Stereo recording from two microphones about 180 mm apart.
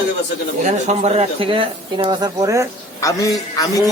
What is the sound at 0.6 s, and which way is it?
Speech, 40° right (ahead or behind).